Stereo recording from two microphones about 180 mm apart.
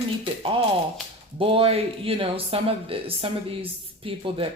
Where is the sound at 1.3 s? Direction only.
30° right (ahead or behind).